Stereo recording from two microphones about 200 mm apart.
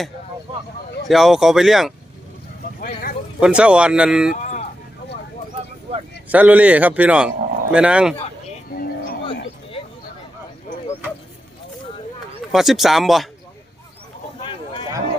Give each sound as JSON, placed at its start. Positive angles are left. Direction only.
{"t": 1.0, "sound": "speech", "side_deg": 0}
{"t": 2.8, "sound": "speech", "side_deg": 45}
{"t": 3.4, "sound": "speech", "side_deg": -5}
{"t": 6.2, "sound": "speech", "side_deg": -5}
{"t": 8.7, "sound": "a sound", "side_deg": 45}
{"t": 12.5, "sound": "speech", "side_deg": 0}